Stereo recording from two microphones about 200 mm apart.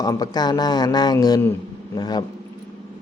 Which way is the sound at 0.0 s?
20° left (ahead or behind).